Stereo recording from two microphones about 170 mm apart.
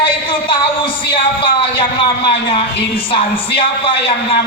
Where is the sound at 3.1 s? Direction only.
30° left (ahead or behind).